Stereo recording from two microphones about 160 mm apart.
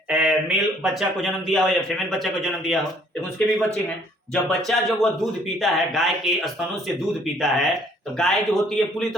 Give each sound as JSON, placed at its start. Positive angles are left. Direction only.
{"t": 0.1, "sound": "speech", "side_deg": -5}